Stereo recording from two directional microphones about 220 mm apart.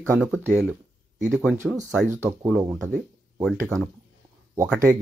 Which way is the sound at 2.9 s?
Centre (ahead or behind).